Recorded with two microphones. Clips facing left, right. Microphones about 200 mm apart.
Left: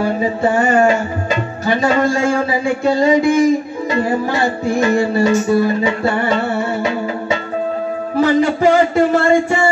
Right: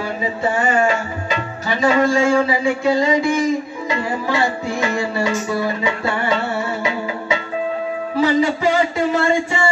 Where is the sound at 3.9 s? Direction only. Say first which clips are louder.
Left 4 dB; 45° left (ahead or behind).